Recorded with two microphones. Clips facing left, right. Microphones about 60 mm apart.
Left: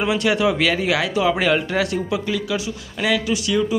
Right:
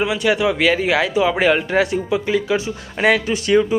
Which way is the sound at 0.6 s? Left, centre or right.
Right.